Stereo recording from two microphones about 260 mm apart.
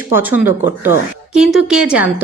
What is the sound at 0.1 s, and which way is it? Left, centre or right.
A woman's voice, centre.